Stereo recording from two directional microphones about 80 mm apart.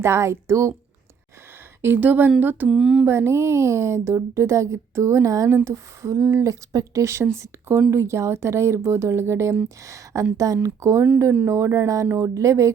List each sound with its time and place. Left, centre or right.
0.0 s speech: right
1.8 s a woman's voice: right
2.6 s a sound: centre
3.1 s speech: right